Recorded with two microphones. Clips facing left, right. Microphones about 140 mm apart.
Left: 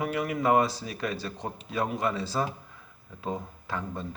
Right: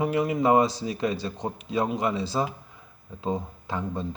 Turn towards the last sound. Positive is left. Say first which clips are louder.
# right 4 dB
turn(degrees=-20)  # may be behind; listen again after turning